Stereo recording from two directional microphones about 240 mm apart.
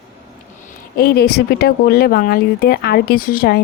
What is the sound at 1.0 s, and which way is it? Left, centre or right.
Speech, left.